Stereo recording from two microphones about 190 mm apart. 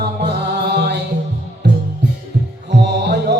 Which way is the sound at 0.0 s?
60° right (ahead or behind).